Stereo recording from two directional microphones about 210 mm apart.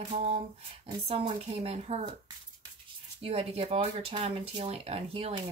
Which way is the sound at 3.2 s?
30° right (ahead or behind).